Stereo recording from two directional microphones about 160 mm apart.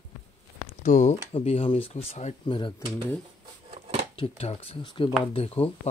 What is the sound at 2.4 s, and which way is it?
Speech, 30° left (ahead or behind).